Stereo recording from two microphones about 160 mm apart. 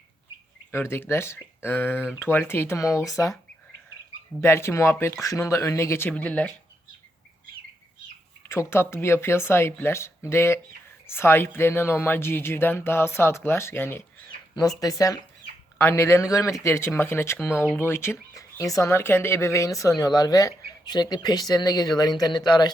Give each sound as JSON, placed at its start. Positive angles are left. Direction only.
{"t": 0.7, "sound": "speech", "side_deg": 15}
{"t": 4.4, "sound": "speech", "side_deg": 15}
{"t": 8.4, "sound": "speech", "side_deg": 15}